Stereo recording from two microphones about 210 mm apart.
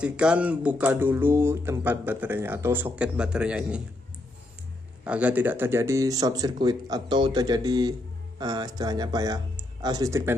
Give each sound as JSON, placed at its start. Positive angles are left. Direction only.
{"t": 0.0, "sound": "speech", "side_deg": -5}
{"t": 5.0, "sound": "speech", "side_deg": -5}